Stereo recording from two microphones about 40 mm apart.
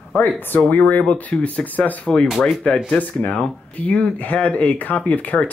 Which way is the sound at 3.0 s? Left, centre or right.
Left.